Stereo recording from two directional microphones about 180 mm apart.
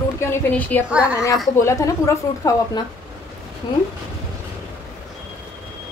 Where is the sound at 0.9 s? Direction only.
5° right (ahead or behind).